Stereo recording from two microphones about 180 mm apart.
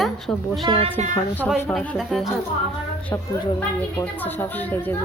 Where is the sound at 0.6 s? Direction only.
30° right (ahead or behind).